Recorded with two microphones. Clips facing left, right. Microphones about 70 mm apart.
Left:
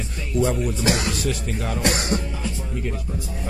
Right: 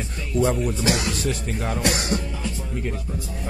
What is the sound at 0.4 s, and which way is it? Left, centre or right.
Speech, right.